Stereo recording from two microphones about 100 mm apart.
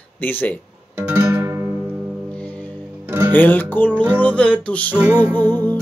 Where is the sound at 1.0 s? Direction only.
20° right (ahead or behind).